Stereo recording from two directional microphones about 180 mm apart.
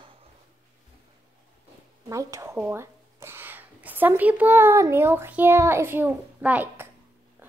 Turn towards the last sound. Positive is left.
turn(degrees=-10)  # may be behind; listen again after turning